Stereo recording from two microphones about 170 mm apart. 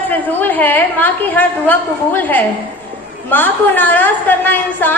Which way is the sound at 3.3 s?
10° left (ahead or behind).